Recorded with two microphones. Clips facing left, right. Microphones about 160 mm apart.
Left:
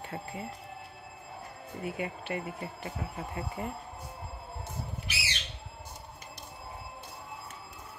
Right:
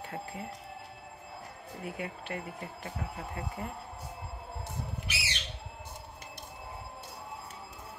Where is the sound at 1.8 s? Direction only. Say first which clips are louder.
Left 3 dB; 5° left (ahead or behind).